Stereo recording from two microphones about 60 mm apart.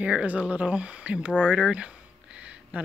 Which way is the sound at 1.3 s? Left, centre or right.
Centre.